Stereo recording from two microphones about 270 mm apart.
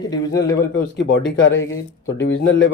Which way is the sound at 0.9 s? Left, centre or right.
Left.